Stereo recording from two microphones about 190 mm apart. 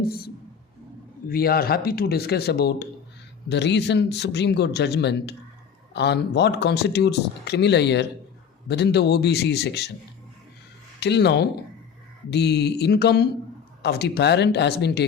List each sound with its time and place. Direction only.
0.0 s speech: 55° left (ahead or behind)
1.3 s speech: 50° left (ahead or behind)
11.0 s speech: 60° left (ahead or behind)